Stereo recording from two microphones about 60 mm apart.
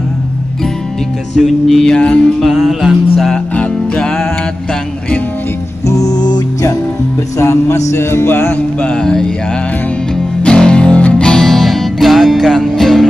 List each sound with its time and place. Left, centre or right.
1.3 s music: centre
1.9 s music: centre
2.4 s music: centre
3.5 s music: centre
5.9 s music: left
7.3 s music: left
9.0 s music: centre
10.4 s music: centre
11.2 s music: centre